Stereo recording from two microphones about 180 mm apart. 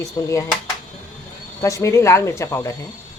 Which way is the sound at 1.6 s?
15° left (ahead or behind).